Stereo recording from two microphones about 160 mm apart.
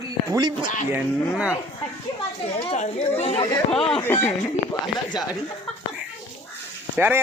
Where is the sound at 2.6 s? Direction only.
40° left (ahead or behind).